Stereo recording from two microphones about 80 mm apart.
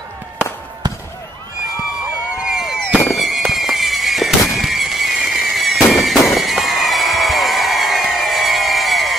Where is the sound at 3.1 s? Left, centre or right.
Centre.